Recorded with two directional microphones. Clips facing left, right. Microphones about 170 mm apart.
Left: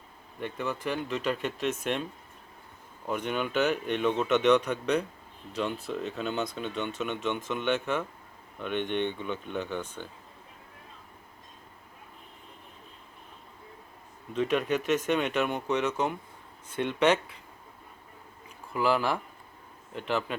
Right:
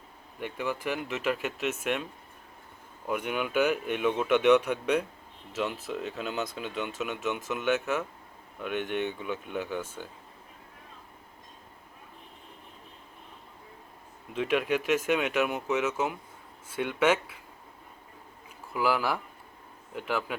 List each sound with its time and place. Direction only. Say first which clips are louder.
0.3 s a man's voice: even; 10° right (ahead or behind)
3.1 s a man's voice: even; 10° right (ahead or behind)
14.3 s a man's voice: even; 10° right (ahead or behind)
18.7 s a man's voice: left 1 dB; 5° right (ahead or behind)